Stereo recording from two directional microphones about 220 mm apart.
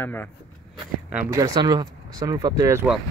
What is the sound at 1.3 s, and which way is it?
Speech, 15° right (ahead or behind).